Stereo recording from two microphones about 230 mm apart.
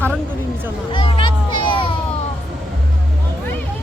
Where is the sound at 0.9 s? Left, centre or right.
Left.